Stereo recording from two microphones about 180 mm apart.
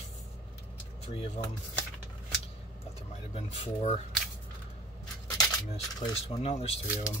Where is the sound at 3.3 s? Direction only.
40° left (ahead or behind).